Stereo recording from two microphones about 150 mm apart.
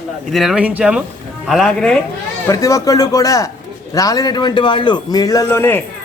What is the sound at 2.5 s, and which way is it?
A man's voice, 20° left (ahead or behind).